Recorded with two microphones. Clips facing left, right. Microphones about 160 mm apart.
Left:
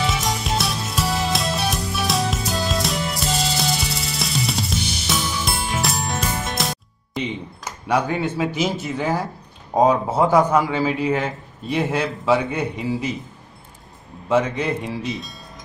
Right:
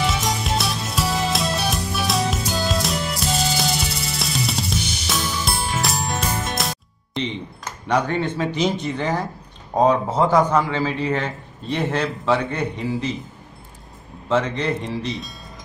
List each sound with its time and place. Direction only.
0.0 s music: centre (ahead or behind)
9.8 s a man's voice: 10° left (ahead or behind)
14.3 s a man's voice: 10° left (ahead or behind)